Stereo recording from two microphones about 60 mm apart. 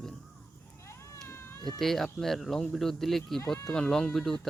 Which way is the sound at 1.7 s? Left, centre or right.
Centre.